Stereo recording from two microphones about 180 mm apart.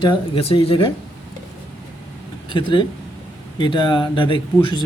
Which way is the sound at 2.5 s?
25° left (ahead or behind).